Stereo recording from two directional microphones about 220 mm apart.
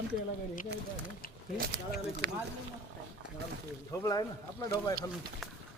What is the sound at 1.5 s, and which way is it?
Speech, 40° right (ahead or behind).